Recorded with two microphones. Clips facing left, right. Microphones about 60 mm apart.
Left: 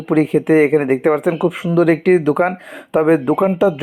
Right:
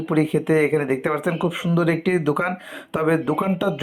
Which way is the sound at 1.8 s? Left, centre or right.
Left.